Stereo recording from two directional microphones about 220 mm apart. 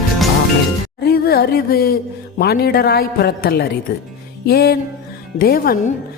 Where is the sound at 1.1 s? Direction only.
45° left (ahead or behind).